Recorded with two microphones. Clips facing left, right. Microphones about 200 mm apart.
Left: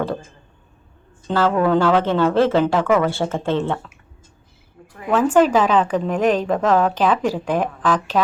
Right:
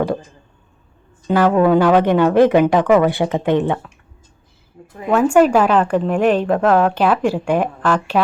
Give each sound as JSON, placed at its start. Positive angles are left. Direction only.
{"t": 0.0, "sound": "speech", "side_deg": -15}
{"t": 1.3, "sound": "speech", "side_deg": -15}
{"t": 4.9, "sound": "a woman's voice", "side_deg": -20}
{"t": 5.1, "sound": "speech", "side_deg": -10}